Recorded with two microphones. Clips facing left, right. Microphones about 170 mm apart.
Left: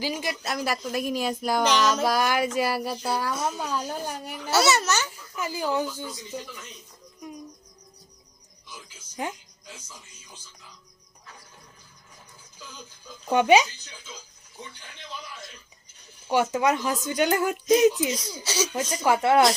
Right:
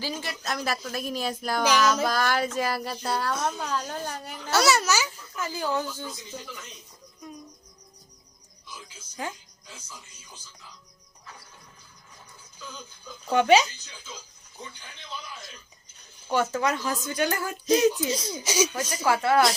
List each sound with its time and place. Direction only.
0.0 s speech: 15° left (ahead or behind)
1.6 s child singing: 5° right (ahead or behind)
2.0 s speech: 10° left (ahead or behind)
5.4 s speech: 15° left (ahead or behind)
9.2 s speech: 15° left (ahead or behind)
13.3 s speech: 15° left (ahead or behind)
16.3 s speech: 15° left (ahead or behind)
18.1 s speech: 25° right (ahead or behind)
18.7 s speech: 15° left (ahead or behind)